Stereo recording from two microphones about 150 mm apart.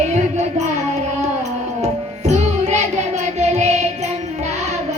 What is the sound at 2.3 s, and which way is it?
Music, 50° right (ahead or behind).